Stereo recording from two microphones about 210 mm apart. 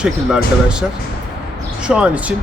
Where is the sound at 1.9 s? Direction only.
5° right (ahead or behind).